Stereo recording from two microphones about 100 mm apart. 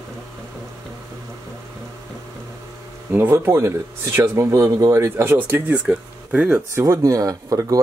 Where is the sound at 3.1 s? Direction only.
25° right (ahead or behind).